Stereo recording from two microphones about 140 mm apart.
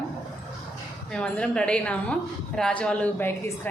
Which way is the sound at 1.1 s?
10° left (ahead or behind).